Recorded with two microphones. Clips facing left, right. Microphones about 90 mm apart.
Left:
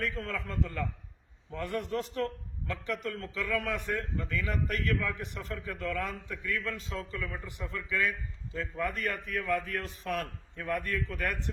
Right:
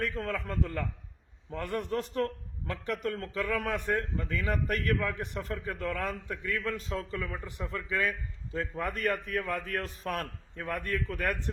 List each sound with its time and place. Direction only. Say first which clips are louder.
0.2 s a man's voice: right 2 dB; 45° right (ahead or behind)